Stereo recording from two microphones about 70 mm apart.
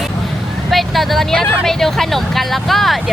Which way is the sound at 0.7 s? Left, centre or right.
Centre.